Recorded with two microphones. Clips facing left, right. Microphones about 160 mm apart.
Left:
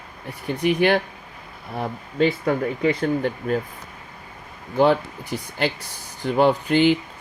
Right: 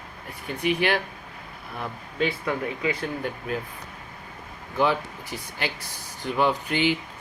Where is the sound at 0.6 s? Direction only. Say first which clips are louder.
Left 5 dB; 40° left (ahead or behind).